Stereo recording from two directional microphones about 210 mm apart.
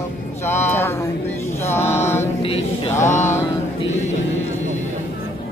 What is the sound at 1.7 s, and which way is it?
Mantra, 10° left (ahead or behind).